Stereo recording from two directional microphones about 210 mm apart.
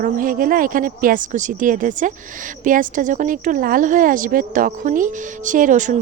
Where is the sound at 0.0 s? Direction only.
40° right (ahead or behind).